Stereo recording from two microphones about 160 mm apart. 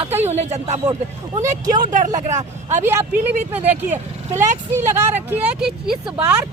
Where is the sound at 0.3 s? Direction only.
45° right (ahead or behind).